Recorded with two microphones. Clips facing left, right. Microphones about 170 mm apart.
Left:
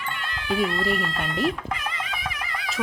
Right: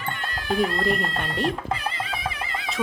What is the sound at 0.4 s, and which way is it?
Speech, 40° right (ahead or behind).